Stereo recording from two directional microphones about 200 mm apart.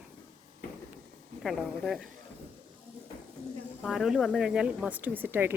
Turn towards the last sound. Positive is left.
turn(degrees=-10)  # may be behind; listen again after turning